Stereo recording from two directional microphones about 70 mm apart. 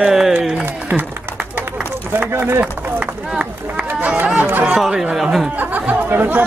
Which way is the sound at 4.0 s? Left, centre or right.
Right.